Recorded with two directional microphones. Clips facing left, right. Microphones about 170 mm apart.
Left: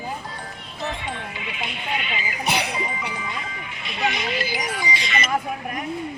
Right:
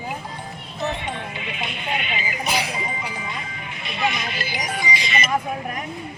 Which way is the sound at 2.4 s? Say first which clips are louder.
Left 2 dB; 65° left (ahead or behind).